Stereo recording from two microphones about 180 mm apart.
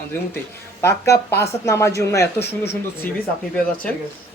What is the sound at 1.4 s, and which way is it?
Speech, 15° left (ahead or behind).